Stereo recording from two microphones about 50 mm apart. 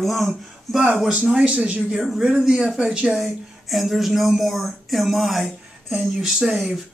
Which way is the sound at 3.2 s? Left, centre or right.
Centre.